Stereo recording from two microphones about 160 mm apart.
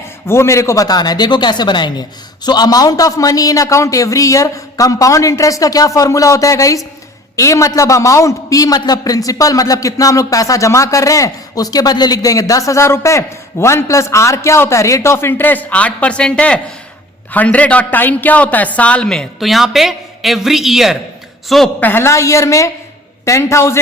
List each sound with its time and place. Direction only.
0.3 s a man's voice: 15° left (ahead or behind)